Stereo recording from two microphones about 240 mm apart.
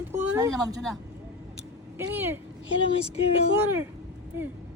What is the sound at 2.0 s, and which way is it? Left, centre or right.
Speech, centre.